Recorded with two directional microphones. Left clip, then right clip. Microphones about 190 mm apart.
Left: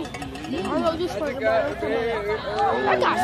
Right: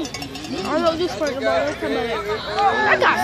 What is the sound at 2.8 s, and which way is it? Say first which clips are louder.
Speech: right 4 dB; 35° right (ahead or behind).